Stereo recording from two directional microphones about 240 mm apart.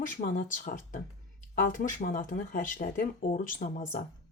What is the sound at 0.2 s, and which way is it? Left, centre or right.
A woman's voice, left.